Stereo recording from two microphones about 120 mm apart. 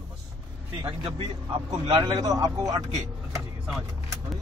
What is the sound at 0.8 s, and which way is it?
Speech, 45° right (ahead or behind).